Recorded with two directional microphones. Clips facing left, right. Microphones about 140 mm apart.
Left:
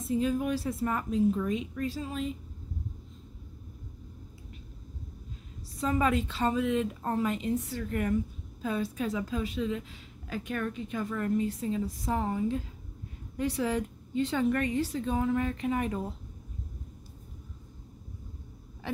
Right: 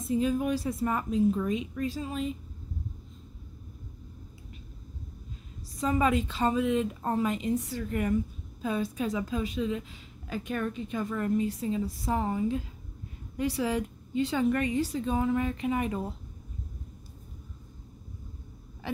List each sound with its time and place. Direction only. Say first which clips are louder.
0.1 s a woman's voice: right 1 dB; 20° right (ahead or behind)
5.8 s a woman's voice: right 1 dB; 15° right (ahead or behind)